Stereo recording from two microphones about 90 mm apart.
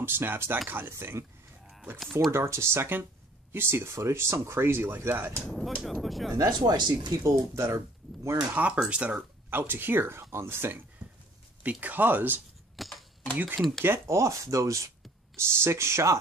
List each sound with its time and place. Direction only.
0.0 s speech: 25° right (ahead or behind)
2.3 s speech: 30° right (ahead or behind)
5.4 s speech: centre (ahead or behind)
6.3 s speech: 40° right (ahead or behind)
8.7 s speech: 10° right (ahead or behind)
11.0 s a sound: 55° right (ahead or behind)
11.6 s speech: 20° right (ahead or behind)
12.7 s typewriter: centre (ahead or behind)
13.6 s speech: centre (ahead or behind)
13.8 s speech: 30° right (ahead or behind)